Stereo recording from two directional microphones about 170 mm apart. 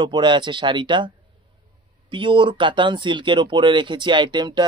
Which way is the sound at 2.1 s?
30° right (ahead or behind).